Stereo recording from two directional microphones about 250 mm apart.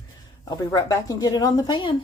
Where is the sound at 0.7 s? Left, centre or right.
Centre.